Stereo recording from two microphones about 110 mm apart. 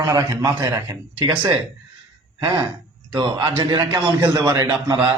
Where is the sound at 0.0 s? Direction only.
35° right (ahead or behind).